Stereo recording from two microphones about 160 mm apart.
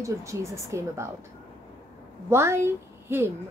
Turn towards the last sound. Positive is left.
turn(degrees=-15)  # may be behind; listen again after turning